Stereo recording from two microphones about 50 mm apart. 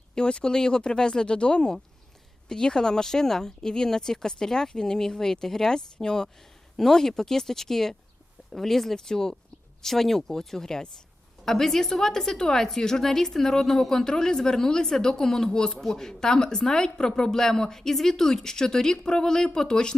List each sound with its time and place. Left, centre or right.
0.1 s speech: centre